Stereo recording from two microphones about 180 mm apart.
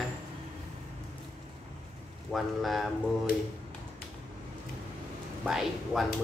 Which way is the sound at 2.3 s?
Centre (ahead or behind).